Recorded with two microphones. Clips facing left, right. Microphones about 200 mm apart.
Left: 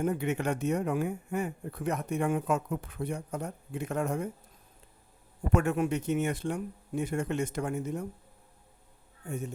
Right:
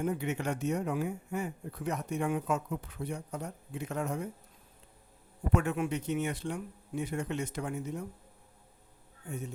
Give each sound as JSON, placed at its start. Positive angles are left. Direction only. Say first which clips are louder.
{"t": 0.0, "sound": "speech", "louder": "left 3 dB", "side_deg": 55}
{"t": 5.5, "sound": "speech", "louder": "left 3 dB", "side_deg": 45}